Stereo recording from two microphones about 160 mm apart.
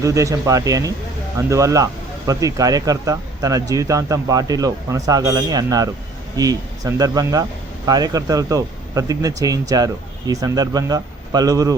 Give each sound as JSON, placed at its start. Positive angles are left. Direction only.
{"t": 0.0, "sound": "speech", "side_deg": -20}